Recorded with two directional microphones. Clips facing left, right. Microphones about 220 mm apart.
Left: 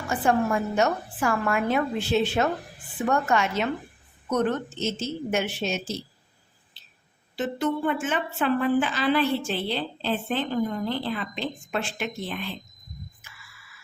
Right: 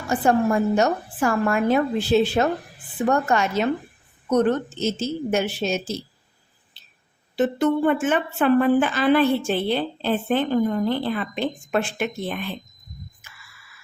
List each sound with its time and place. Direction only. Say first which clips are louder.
0.1 s a woman's voice: right 4 dB; 40° right (ahead or behind)
7.3 s a woman's voice: right 6 dB; 55° right (ahead or behind)